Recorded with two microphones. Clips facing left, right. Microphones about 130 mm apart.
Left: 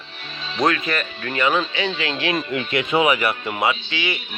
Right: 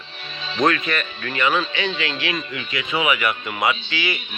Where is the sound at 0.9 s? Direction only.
35° left (ahead or behind).